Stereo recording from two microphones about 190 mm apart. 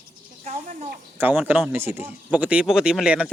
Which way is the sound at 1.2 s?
10° right (ahead or behind).